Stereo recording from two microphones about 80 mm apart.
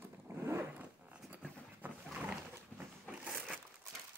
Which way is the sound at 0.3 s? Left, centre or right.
Right.